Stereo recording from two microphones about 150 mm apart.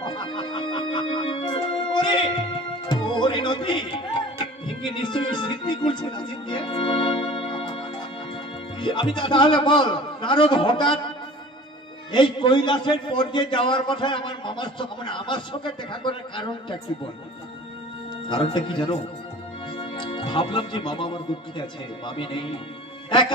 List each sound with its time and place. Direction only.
0.0 s music: 30° left (ahead or behind)
8.7 s a man's voice: 35° left (ahead or behind)
12.1 s a man's voice: 30° left (ahead or behind)
18.3 s a man's voice: 35° left (ahead or behind)